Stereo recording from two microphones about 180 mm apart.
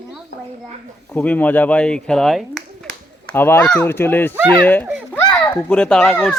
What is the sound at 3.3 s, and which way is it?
Speech, 10° left (ahead or behind).